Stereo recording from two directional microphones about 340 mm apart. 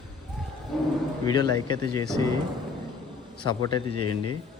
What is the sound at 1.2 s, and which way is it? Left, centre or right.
Speech, centre.